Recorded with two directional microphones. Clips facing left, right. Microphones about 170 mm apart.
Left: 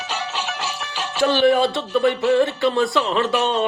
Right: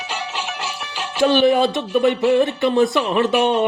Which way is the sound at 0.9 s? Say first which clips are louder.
Right 3 dB; 10° right (ahead or behind).